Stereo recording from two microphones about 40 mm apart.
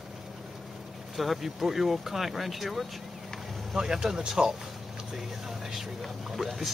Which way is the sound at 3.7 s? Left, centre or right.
Centre.